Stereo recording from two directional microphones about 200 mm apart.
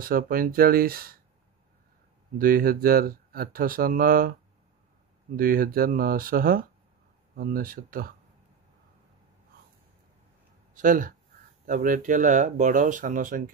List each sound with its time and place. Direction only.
0.0 s speech: 45° right (ahead or behind)
2.3 s speech: 45° right (ahead or behind)
5.3 s speech: 45° right (ahead or behind)
10.7 s speech: 40° right (ahead or behind)